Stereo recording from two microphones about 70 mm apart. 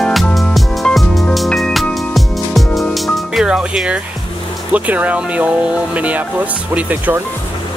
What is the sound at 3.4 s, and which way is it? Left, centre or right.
Music, centre.